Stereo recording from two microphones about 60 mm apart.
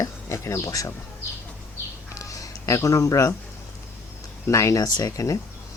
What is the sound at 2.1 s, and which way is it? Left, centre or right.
Music, left.